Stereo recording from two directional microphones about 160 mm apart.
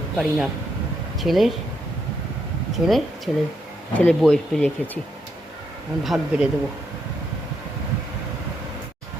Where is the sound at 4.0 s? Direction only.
5° left (ahead or behind).